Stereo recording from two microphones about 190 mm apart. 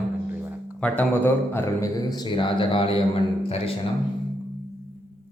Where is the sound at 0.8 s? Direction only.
5° left (ahead or behind); by 3.7 s 30° left (ahead or behind).